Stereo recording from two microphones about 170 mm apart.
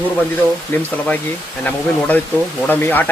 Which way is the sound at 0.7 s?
10° left (ahead or behind).